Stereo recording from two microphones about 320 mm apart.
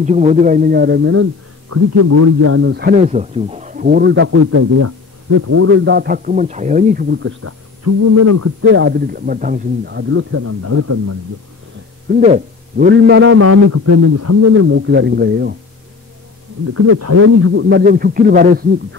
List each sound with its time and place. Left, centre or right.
0.0 s speech: right
1.7 s a man's voice: right
8.6 s a man's voice: right
12.1 s a man's voice: right
16.7 s a man's voice: right